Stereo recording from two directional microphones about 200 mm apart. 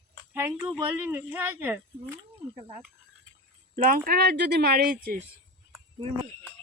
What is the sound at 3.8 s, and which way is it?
Speech, 45° right (ahead or behind).